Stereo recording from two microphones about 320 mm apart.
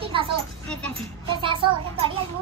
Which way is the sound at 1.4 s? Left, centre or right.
Centre.